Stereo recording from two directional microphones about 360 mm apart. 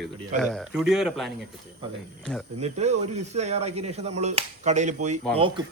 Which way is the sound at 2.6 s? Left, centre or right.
Centre.